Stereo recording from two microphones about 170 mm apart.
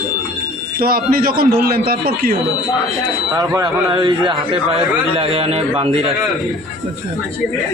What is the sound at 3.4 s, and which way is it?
A man's voice, 20° right (ahead or behind).